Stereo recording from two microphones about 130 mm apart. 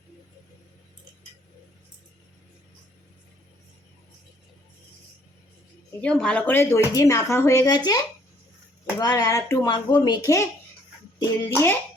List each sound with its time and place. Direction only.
6.0 s speech: 5° left (ahead or behind); by 7.8 s 25° left (ahead or behind)
9.0 s speech: 30° left (ahead or behind)
9.6 s speech: 35° left (ahead or behind); by 11.8 s 20° left (ahead or behind)